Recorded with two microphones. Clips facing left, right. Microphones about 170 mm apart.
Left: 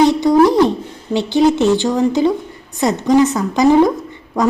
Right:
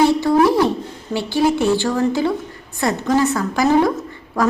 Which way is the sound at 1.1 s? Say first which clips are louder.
Left 4 dB; 20° left (ahead or behind).